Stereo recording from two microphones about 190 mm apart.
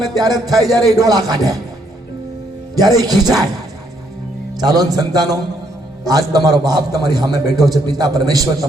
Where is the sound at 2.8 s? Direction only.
20° right (ahead or behind).